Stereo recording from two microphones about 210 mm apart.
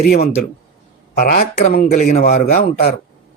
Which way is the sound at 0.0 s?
45° left (ahead or behind).